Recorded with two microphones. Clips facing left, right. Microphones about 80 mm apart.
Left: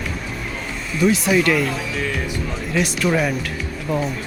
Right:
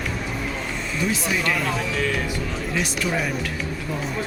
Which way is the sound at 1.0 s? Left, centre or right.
Left.